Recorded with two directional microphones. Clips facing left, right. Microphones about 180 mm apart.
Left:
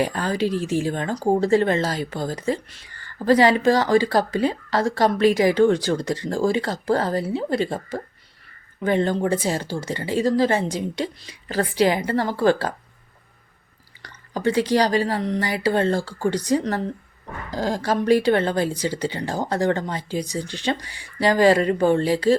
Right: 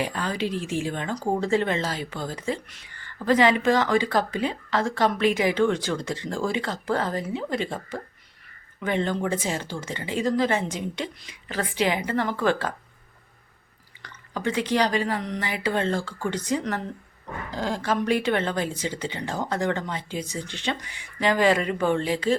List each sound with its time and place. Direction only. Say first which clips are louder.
0.0 s speech: left 5 dB; 40° left (ahead or behind)
14.0 s speech: left 5 dB; 35° left (ahead or behind)